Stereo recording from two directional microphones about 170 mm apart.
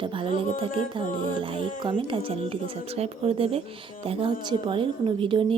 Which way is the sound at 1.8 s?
30° right (ahead or behind).